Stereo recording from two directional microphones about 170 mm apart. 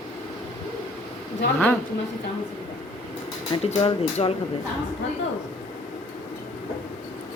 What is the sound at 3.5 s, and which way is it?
Speech, 35° left (ahead or behind).